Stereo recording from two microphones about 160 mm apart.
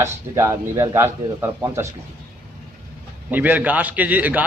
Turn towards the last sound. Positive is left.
turn(degrees=-10)  # may be behind; listen again after turning